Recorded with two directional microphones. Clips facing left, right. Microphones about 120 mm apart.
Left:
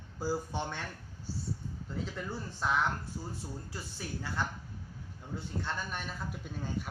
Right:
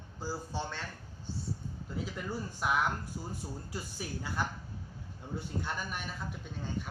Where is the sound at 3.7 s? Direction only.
15° right (ahead or behind).